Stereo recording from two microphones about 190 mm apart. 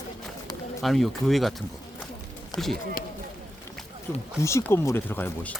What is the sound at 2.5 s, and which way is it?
Speech, 25° left (ahead or behind).